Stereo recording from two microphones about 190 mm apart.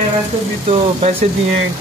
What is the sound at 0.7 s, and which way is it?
Speech, 30° right (ahead or behind).